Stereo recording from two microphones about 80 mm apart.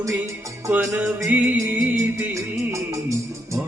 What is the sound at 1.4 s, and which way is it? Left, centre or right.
Music, right.